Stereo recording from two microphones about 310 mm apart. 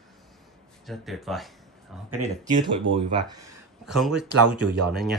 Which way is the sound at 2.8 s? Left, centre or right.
Centre.